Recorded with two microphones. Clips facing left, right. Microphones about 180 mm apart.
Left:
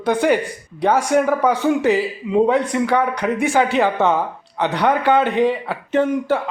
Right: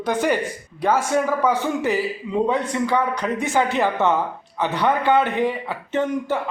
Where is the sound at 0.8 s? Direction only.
15° left (ahead or behind).